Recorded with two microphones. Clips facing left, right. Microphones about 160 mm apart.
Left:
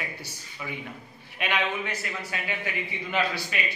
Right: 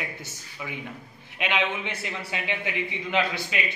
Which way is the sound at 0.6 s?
5° right (ahead or behind).